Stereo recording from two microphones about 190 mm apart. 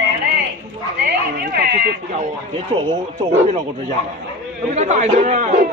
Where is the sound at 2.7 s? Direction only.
30° right (ahead or behind).